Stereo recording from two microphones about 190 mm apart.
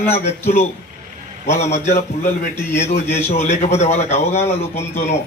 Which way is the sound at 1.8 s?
35° left (ahead or behind).